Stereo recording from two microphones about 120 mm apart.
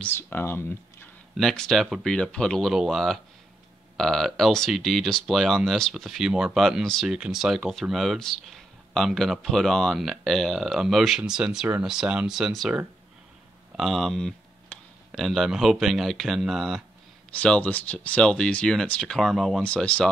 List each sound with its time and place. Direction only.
0.0 s speech: 15° left (ahead or behind)
1.3 s speech: 5° left (ahead or behind)
17.3 s speech: 10° left (ahead or behind)